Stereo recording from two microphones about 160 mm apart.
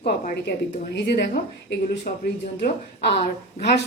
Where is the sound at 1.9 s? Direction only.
75° left (ahead or behind).